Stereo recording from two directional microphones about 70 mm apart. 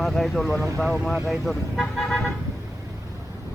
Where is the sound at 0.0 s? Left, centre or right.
Centre.